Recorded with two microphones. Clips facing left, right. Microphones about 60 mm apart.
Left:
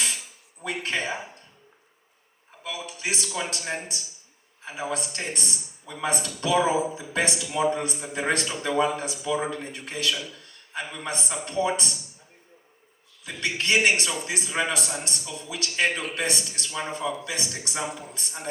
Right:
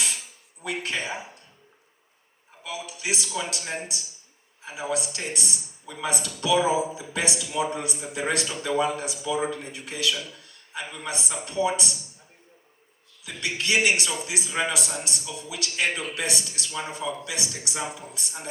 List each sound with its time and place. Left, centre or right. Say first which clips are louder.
0.6 s speech: left 1 dB; left
2.6 s speech: even; left
13.2 s speech: left 2 dB; left